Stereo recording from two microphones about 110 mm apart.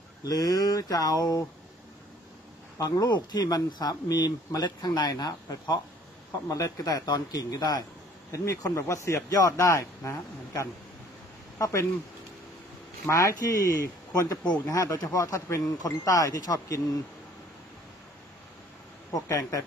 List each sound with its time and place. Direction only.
0.2 s speech: 35° left (ahead or behind)
2.8 s speech: 35° left (ahead or behind)
13.0 s speech: 30° left (ahead or behind)
19.1 s speech: 30° left (ahead or behind)